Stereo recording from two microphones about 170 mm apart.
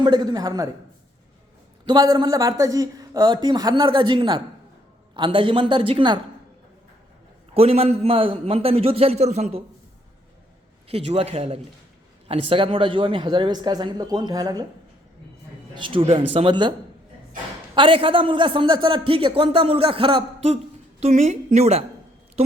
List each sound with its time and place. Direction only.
0.0 s a man's voice: 25° right (ahead or behind)
1.8 s a man's voice: 25° right (ahead or behind)
7.5 s a man's voice: 35° right (ahead or behind)
10.8 s a man's voice: 35° right (ahead or behind)
15.7 s a man's voice: 30° right (ahead or behind)
17.7 s a man's voice: 30° right (ahead or behind)